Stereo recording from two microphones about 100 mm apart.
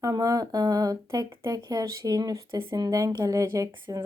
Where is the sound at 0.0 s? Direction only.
40° right (ahead or behind).